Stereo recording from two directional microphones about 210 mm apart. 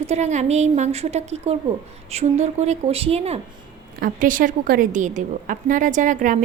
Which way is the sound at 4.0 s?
40° right (ahead or behind).